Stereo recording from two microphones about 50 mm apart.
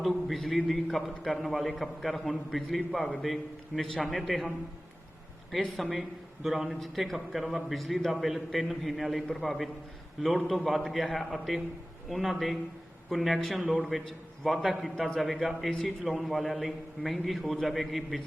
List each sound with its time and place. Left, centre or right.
0.0 s a man's voice: centre
5.5 s a man's voice: centre